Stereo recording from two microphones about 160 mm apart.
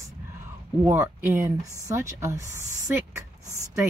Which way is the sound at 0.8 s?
20° right (ahead or behind).